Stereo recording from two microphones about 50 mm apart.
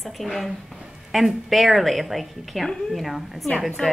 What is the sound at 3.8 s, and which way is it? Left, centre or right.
Speech, centre.